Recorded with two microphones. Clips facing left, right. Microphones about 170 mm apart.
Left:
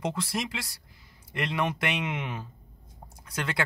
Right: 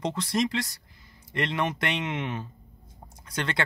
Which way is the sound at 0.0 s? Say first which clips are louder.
Right 4 dB; 5° left (ahead or behind).